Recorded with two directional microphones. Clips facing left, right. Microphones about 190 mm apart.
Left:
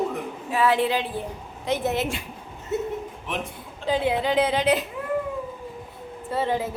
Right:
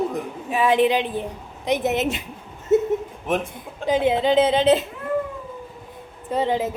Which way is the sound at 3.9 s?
20° right (ahead or behind).